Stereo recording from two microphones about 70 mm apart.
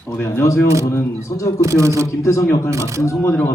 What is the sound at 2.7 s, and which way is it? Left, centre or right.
Speech, right.